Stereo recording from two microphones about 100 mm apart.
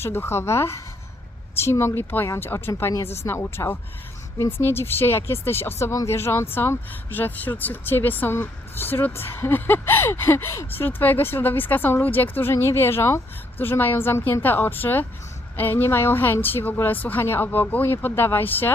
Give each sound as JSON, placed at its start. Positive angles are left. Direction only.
{"t": 0.0, "sound": "speech", "side_deg": 25}